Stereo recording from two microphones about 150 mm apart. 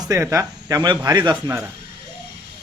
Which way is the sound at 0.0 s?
20° right (ahead or behind).